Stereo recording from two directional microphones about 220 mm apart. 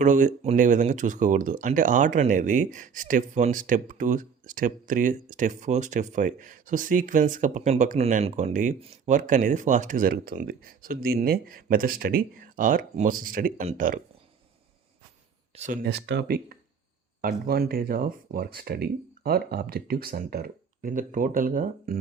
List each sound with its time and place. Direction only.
0.0 s speech: 35° right (ahead or behind)
15.5 s speech: 35° right (ahead or behind)